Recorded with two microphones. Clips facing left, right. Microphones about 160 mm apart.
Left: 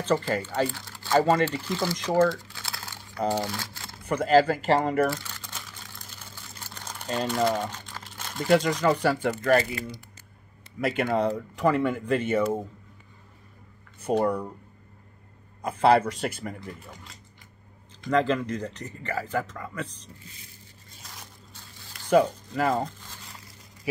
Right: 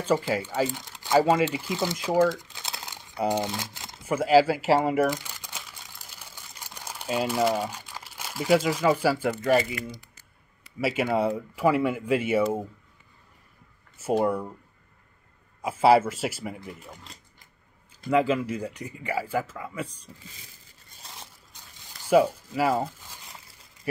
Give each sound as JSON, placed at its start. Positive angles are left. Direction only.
{"t": 0.0, "sound": "speech", "side_deg": -10}
{"t": 2.2, "sound": "crumpling", "side_deg": -20}
{"t": 4.0, "sound": "speech", "side_deg": -5}
{"t": 5.0, "sound": "crumpling", "side_deg": -15}
{"t": 10.8, "sound": "speech", "side_deg": -5}
{"t": 13.9, "sound": "speech", "side_deg": -5}
{"t": 15.6, "sound": "speech", "side_deg": -5}
{"t": 18.0, "sound": "speech", "side_deg": -5}
{"t": 22.1, "sound": "speech", "side_deg": -5}